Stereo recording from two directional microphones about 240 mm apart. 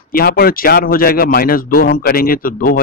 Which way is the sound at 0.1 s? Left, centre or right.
Left.